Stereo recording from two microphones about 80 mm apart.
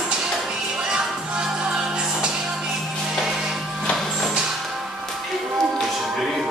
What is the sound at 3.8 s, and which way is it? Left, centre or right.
Music, centre.